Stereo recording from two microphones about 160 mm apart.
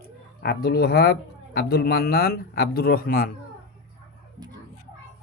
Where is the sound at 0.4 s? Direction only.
80° left.